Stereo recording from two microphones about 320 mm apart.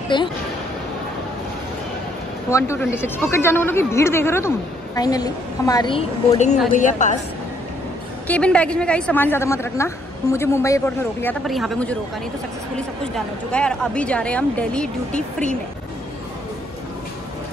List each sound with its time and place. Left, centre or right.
0.1 s speech: centre
2.5 s a woman's voice: centre; by 7.2 s left
8.3 s a woman's voice: centre